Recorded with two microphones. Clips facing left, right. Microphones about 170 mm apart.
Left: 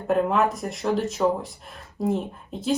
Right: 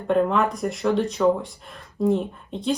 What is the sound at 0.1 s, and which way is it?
Speech, 5° left (ahead or behind).